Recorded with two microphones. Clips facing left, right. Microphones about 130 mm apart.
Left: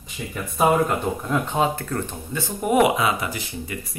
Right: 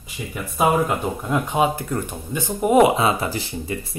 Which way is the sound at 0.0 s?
5° right (ahead or behind).